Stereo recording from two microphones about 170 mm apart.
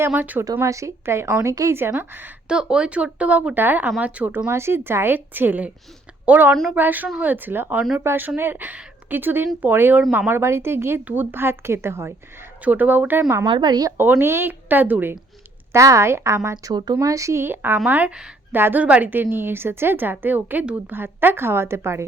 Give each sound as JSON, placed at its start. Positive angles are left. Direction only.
{"t": 0.1, "sound": "a woman's voice", "side_deg": -10}
{"t": 13.5, "sound": "a woman's voice", "side_deg": -25}